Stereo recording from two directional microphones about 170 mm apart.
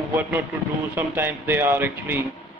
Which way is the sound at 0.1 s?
10° right (ahead or behind).